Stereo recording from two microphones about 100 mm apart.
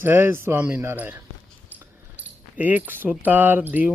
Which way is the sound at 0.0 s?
20° right (ahead or behind).